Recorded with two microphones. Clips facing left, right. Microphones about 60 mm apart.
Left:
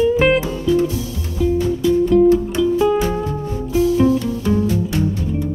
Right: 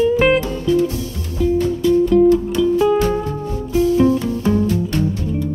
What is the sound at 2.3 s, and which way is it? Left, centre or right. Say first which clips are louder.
Music: even; left.